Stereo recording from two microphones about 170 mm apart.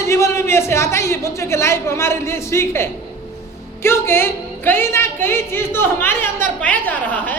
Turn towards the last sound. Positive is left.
turn(degrees=10)  # may be behind; listen again after turning